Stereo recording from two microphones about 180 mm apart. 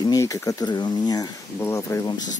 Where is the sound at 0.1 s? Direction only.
15° left (ahead or behind).